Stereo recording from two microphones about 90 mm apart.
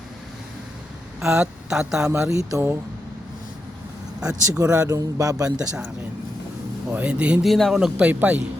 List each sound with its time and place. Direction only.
1.2 s a woman's voice: 10° right (ahead or behind)
2.3 s speech: 35° right (ahead or behind)
4.3 s speech: 40° right (ahead or behind)
5.5 s speech: 15° right (ahead or behind)
6.9 s speech: 15° right (ahead or behind)
7.4 s a man's voice: centre (ahead or behind)
7.9 s speech: 15° right (ahead or behind)